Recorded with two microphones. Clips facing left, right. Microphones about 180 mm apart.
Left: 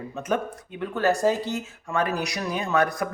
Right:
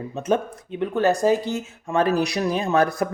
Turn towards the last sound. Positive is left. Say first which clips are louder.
# right 3 dB
turn(degrees=-30)  # may be behind; listen again after turning